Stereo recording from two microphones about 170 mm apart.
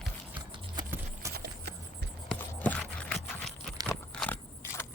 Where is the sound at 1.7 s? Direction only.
70° right (ahead or behind).